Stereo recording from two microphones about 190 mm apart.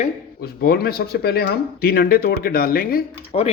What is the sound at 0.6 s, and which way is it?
Speech, 55° left (ahead or behind).